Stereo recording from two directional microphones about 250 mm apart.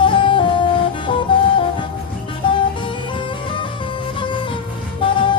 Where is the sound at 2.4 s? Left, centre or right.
Left.